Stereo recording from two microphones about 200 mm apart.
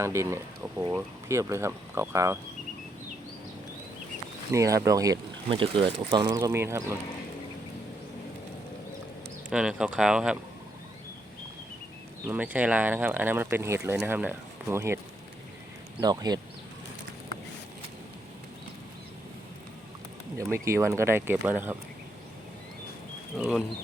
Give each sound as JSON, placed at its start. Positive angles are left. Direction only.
{"t": 0.0, "sound": "speech", "side_deg": -15}
{"t": 4.5, "sound": "speech", "side_deg": -15}
{"t": 9.5, "sound": "speech", "side_deg": -5}
{"t": 12.3, "sound": "speech", "side_deg": -10}
{"t": 16.0, "sound": "speech", "side_deg": -20}
{"t": 20.4, "sound": "speech", "side_deg": -15}
{"t": 23.4, "sound": "speech", "side_deg": -5}